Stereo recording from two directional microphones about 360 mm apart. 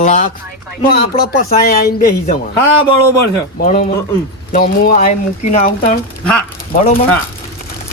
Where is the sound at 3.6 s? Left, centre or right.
Left.